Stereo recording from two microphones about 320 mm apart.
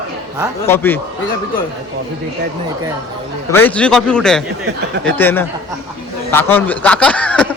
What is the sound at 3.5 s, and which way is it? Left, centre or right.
Speech, centre.